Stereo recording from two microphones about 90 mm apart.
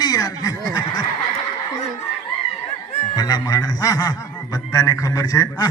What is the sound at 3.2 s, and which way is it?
A man's voice, 45° left (ahead or behind).